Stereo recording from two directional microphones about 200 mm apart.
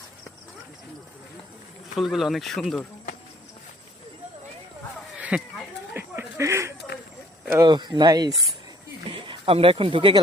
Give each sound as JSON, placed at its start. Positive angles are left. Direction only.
{"t": 2.0, "sound": "speech", "side_deg": 0}
{"t": 5.1, "sound": "a sound", "side_deg": -5}
{"t": 7.4, "sound": "speech", "side_deg": -15}